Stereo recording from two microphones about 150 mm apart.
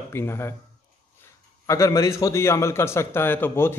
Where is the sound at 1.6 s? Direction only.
20° left (ahead or behind).